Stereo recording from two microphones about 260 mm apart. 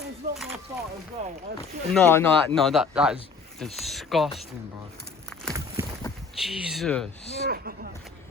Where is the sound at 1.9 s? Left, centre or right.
Centre.